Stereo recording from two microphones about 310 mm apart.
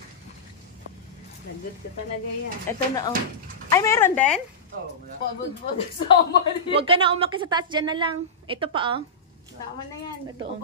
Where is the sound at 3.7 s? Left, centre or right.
Centre.